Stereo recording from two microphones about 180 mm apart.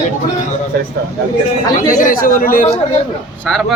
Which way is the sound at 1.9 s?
50° left (ahead or behind).